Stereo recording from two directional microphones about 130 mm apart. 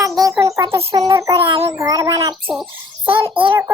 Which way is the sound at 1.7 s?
25° right (ahead or behind).